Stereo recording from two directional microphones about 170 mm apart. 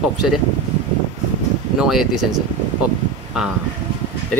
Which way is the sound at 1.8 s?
Centre (ahead or behind).